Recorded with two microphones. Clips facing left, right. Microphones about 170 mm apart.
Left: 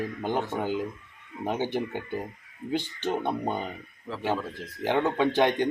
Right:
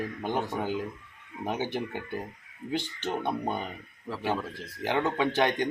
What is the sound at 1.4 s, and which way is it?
Speech, 15° left (ahead or behind).